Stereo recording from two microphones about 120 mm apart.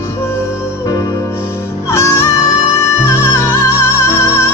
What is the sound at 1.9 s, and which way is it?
Music, 25° left (ahead or behind).